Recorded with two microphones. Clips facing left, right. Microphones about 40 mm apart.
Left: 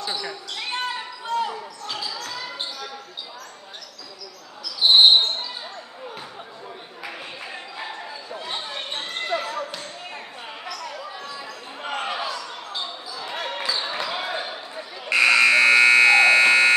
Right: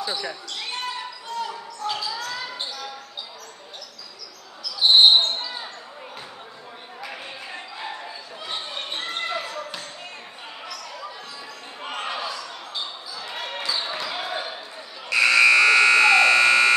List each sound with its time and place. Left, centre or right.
0.0 s speech: centre
0.7 s basketball bounce: centre
1.8 s basketball bounce: centre
4.8 s basketball bounce: centre
8.5 s basketball bounce: centre
11.8 s basketball bounce: centre
15.0 s buzzer: left